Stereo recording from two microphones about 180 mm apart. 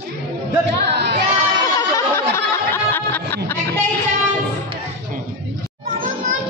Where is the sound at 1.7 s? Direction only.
15° left (ahead or behind).